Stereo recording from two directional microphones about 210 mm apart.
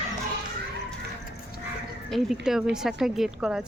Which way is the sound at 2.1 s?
Centre (ahead or behind).